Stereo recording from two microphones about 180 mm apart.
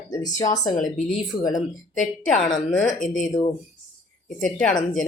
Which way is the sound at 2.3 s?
Centre (ahead or behind).